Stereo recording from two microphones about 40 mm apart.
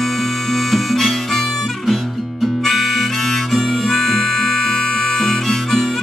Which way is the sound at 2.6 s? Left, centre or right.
Centre.